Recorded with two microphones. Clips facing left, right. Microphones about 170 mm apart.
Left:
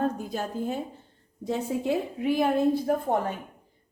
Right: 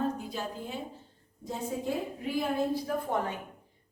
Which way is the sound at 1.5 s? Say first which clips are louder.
Left 6 dB; 75° left (ahead or behind).